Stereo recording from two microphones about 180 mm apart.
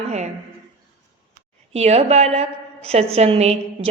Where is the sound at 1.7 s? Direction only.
35° right (ahead or behind).